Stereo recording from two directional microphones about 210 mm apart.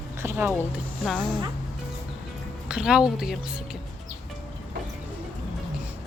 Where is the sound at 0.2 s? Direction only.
10° right (ahead or behind).